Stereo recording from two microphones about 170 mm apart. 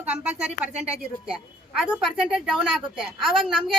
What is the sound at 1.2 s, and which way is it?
A woman's voice, 5° right (ahead or behind).